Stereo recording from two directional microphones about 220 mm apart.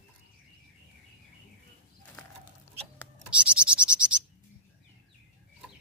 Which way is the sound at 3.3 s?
5° right (ahead or behind).